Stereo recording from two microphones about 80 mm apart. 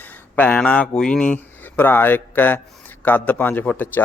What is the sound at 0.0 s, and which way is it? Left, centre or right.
A man's voice, left.